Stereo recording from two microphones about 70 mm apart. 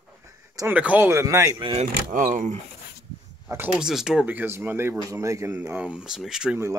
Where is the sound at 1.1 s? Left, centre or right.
Right.